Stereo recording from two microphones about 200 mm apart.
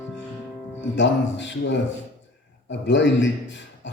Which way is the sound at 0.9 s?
65° left (ahead or behind).